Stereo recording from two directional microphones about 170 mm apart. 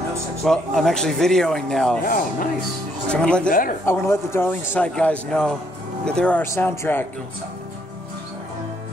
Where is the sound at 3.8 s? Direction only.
15° left (ahead or behind).